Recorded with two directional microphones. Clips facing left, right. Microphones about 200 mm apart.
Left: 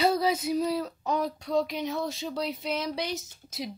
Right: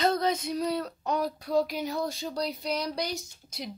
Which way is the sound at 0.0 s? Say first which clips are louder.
Left 1 dB; 10° left (ahead or behind).